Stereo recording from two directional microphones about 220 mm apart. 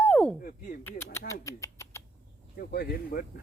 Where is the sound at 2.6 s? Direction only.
45° left (ahead or behind).